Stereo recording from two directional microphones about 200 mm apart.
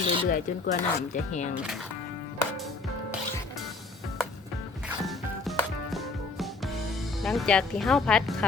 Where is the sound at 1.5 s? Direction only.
Centre (ahead or behind).